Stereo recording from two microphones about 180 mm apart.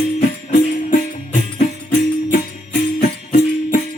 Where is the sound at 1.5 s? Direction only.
55° left (ahead or behind).